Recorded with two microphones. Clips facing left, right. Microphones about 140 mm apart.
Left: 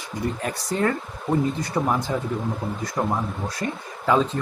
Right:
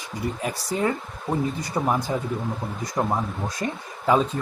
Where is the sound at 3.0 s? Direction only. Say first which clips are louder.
Even; 15° right (ahead or behind).